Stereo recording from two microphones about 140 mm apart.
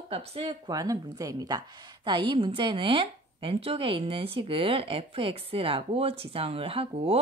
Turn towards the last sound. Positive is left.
turn(degrees=-45)  # may be behind; listen again after turning